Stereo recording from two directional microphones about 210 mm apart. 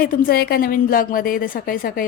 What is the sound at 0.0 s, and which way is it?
A woman's voice, 45° left (ahead or behind).